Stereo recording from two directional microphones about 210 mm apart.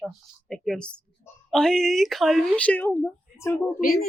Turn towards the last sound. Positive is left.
turn(degrees=45)  # may be behind; listen again after turning